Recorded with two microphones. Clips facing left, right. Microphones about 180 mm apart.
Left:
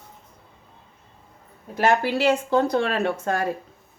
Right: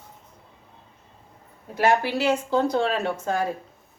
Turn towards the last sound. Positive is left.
turn(degrees=60)  # may be behind; listen again after turning